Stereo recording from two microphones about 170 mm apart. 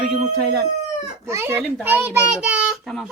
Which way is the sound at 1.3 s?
15° right (ahead or behind).